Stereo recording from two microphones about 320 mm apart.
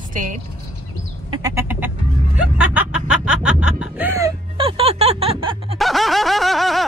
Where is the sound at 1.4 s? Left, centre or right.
Centre.